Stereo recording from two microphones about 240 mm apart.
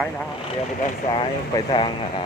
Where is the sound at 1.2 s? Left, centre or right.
Left.